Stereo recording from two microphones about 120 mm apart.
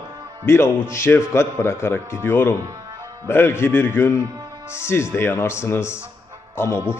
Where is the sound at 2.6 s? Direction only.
25° right (ahead or behind).